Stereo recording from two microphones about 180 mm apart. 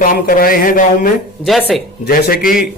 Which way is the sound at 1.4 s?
5° left (ahead or behind).